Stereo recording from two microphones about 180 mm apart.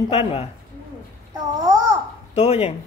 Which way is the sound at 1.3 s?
20° right (ahead or behind).